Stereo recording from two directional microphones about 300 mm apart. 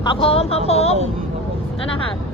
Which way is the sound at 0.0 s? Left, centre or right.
Centre.